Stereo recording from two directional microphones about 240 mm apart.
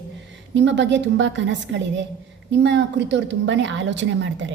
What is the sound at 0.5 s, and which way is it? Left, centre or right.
A woman's voice, right.